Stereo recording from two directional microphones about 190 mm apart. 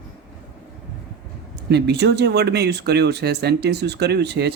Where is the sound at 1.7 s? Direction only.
60° right (ahead or behind).